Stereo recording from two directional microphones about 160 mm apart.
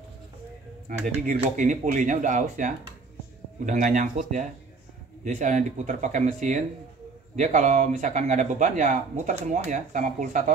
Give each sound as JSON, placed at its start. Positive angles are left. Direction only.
{"t": 0.8, "sound": "speech", "side_deg": -55}